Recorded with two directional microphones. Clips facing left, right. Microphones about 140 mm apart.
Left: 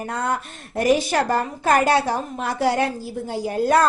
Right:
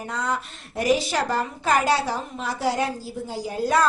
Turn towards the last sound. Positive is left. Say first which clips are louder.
# left 4 dB
turn(degrees=55)  # may be behind; listen again after turning